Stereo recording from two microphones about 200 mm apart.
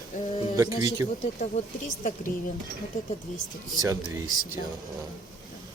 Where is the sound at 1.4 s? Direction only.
35° left (ahead or behind).